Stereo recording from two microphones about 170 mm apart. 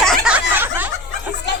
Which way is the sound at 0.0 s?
Centre (ahead or behind).